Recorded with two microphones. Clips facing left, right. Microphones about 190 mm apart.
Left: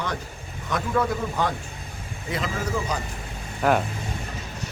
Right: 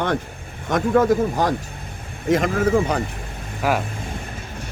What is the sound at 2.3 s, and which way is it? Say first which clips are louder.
Speech: right 10 dB; 55° right (ahead or behind).